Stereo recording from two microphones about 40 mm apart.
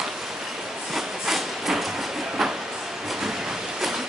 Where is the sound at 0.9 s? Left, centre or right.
Centre.